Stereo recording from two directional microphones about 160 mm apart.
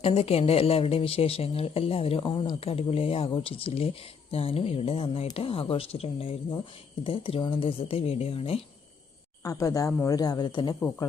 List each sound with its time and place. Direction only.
0.0 s speech: 40° left (ahead or behind)
9.4 s speech: 20° left (ahead or behind)